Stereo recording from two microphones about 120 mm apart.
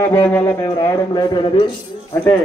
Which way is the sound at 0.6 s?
30° left (ahead or behind).